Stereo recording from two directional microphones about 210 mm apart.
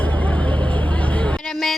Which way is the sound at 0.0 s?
10° left (ahead or behind).